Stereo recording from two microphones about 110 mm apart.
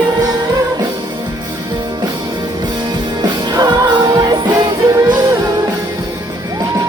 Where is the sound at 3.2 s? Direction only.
40° right (ahead or behind).